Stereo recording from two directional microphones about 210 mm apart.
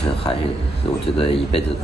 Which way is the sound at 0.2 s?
25° left (ahead or behind).